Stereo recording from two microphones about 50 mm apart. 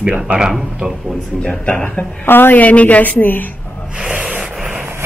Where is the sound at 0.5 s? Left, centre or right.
Centre.